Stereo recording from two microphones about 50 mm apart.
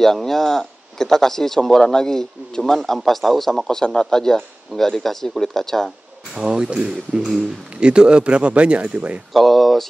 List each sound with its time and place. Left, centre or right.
0.0 s speech: centre
6.3 s a man's voice: centre
9.3 s speech: centre